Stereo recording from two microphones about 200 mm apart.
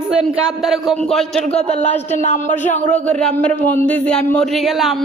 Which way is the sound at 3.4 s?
5° left (ahead or behind).